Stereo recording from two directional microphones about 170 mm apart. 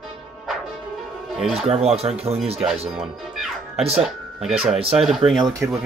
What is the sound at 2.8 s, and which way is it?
Speech, centre (ahead or behind).